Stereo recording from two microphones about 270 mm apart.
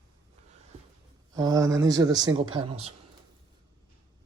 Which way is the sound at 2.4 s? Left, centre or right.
Right.